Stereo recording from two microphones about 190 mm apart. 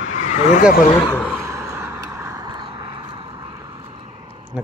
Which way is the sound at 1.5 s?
10° right (ahead or behind).